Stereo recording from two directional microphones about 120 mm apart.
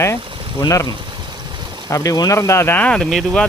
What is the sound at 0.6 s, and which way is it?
Speech, 30° left (ahead or behind).